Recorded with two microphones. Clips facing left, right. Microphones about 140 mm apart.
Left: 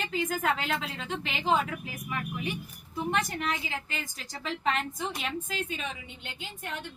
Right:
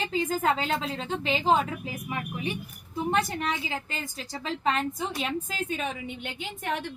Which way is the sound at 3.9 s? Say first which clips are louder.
Right 3 dB; 35° right (ahead or behind).